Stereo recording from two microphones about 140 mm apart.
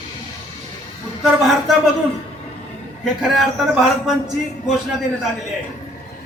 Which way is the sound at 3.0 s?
5° right (ahead or behind).